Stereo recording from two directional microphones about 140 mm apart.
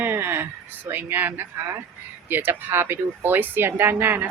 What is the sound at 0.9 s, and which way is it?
Speech, 15° right (ahead or behind).